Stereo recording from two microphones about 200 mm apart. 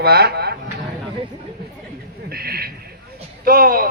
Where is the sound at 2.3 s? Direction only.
50° right (ahead or behind).